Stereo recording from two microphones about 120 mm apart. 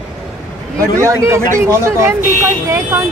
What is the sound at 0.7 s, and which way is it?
Speech, 25° right (ahead or behind).